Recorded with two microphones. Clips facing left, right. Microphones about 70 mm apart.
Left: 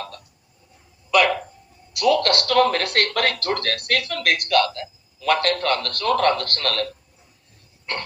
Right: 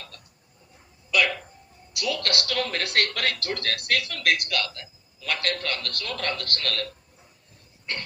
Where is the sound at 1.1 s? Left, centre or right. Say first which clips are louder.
Left 6 dB; left.